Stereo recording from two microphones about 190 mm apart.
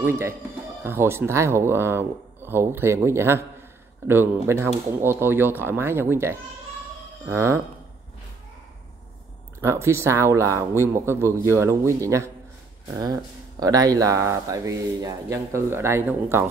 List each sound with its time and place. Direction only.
0.0 s speech: 15° right (ahead or behind)
9.6 s speech: 15° right (ahead or behind)